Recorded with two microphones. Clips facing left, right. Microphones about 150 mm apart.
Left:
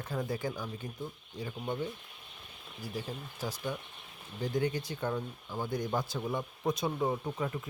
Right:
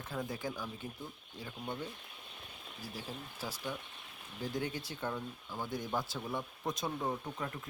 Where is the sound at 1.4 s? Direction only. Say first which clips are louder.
Left 5 dB; 10° left (ahead or behind).